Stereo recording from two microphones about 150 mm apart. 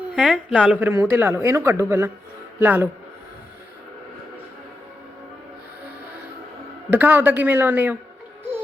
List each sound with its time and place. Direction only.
0.2 s speech: 5° right (ahead or behind)
6.9 s speech: 10° right (ahead or behind)